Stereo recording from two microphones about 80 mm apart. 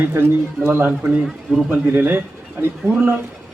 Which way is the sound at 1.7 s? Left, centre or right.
Right.